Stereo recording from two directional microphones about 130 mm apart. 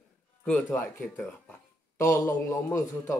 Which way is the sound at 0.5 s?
10° left (ahead or behind).